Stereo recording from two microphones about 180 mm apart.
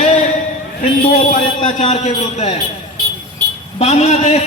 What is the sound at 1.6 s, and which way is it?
Speech, 40° left (ahead or behind).